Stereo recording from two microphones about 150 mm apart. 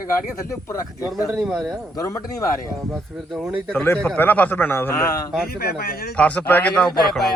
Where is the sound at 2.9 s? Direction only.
Centre (ahead or behind).